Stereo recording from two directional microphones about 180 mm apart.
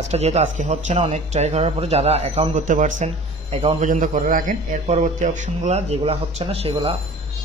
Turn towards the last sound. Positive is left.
turn(degrees=-30)  # may be behind; listen again after turning